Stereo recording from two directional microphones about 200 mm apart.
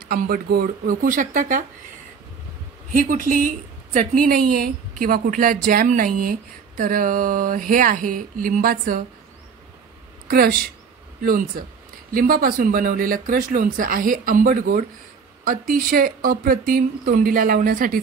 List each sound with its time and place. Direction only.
0.1 s speech: 50° right (ahead or behind)
2.9 s a woman's voice: 40° right (ahead or behind)
10.2 s a woman's voice: 45° right (ahead or behind)